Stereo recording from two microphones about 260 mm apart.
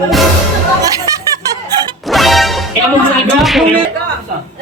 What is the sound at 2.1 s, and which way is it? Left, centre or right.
Music, centre.